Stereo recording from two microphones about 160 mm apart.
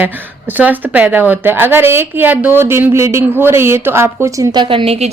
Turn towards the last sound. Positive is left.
turn(degrees=-40)  # may be behind; listen again after turning